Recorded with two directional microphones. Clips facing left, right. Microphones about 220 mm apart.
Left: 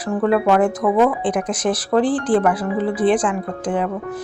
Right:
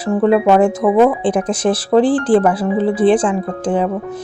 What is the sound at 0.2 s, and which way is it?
Speech, 25° right (ahead or behind).